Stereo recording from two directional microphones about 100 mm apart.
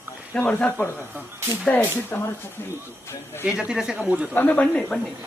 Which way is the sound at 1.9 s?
25° left (ahead or behind).